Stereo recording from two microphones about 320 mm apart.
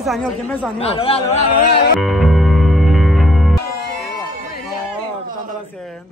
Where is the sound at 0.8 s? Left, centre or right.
Centre.